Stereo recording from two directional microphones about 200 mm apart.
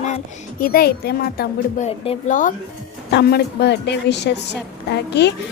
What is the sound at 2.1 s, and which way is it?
Speech, 40° left (ahead or behind).